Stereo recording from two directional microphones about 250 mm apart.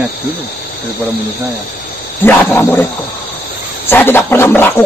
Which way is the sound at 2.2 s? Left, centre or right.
Centre.